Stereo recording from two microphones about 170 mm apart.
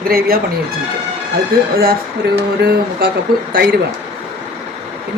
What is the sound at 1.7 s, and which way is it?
Speech, 60° right (ahead or behind).